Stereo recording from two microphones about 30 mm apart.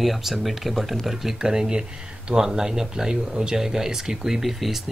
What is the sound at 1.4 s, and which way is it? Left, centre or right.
Speech, right.